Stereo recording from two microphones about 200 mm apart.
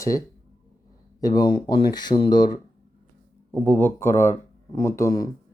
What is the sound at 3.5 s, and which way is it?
Speech, 10° left (ahead or behind).